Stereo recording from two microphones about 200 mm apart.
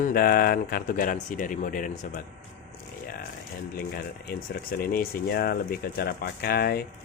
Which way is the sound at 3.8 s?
50° left (ahead or behind).